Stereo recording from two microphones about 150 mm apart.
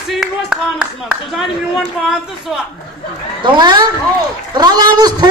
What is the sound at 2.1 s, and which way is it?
Speech, 5° right (ahead or behind).